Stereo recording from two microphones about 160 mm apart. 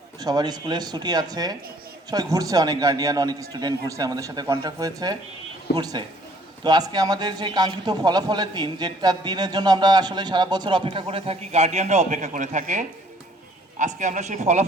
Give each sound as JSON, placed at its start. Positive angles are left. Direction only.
{"t": 0.2, "sound": "a man's voice", "side_deg": -25}